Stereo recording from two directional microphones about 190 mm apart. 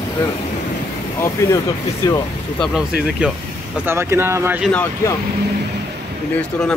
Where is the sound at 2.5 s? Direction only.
Centre (ahead or behind).